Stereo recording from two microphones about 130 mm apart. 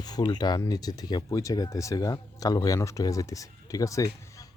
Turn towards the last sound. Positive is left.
turn(degrees=25)  # may be behind; listen again after turning